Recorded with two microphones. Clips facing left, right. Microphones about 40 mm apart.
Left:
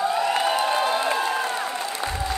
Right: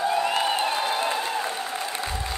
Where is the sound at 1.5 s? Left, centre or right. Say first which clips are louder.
Left 3 dB; left.